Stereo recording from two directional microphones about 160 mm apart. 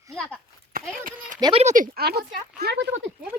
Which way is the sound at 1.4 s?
30° right (ahead or behind).